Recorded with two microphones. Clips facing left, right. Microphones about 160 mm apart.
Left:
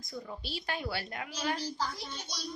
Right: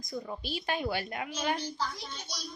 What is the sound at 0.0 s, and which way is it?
A woman's voice, 15° right (ahead or behind).